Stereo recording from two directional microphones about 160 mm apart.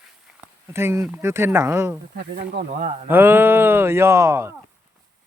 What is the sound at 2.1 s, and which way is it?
Speech, 85° right.